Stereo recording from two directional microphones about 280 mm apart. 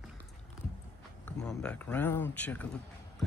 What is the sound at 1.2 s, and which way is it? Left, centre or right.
Speech, centre.